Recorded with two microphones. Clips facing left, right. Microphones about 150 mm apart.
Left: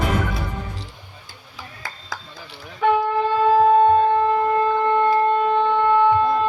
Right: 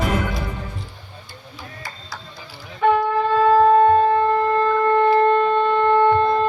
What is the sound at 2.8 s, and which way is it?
Shofar, centre (ahead or behind).